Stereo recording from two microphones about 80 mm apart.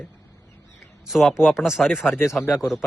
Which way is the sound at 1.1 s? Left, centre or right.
Centre.